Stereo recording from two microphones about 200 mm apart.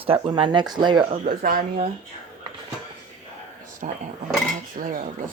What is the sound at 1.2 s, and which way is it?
Speech, 45° right (ahead or behind).